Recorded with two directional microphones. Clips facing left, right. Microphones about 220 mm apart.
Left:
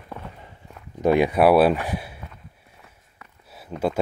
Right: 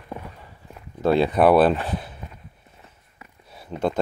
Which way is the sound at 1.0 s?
15° left (ahead or behind).